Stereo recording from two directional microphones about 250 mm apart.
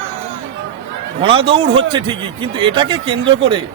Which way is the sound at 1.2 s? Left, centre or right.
Right.